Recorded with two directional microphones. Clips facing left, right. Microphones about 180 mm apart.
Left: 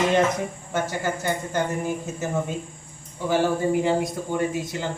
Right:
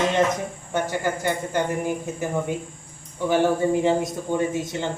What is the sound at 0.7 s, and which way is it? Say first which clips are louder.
A man's voice: right 3 dB; 15° right (ahead or behind).